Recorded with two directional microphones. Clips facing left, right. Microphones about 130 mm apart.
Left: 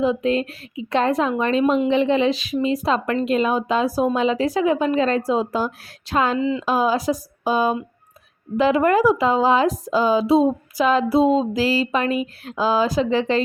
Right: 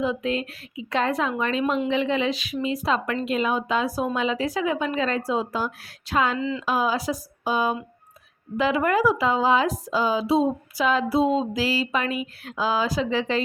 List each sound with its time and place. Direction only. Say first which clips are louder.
0.0 s speech: left 6 dB; 30° left (ahead or behind)
6.4 s speech: left 5 dB; 15° left (ahead or behind)
6.7 s speech: left 3 dB; 40° left (ahead or behind)